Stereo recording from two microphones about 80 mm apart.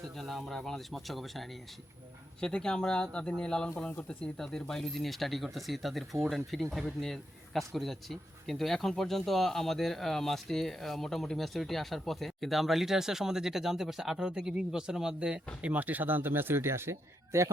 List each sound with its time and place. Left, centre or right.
0.2 s a man's voice: centre
15.6 s speech: centre; by 17.5 s right